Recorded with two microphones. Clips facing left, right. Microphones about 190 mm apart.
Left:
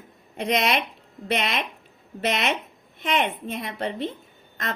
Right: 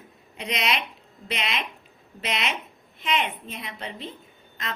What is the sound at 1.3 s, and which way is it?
A woman's voice, 50° left (ahead or behind).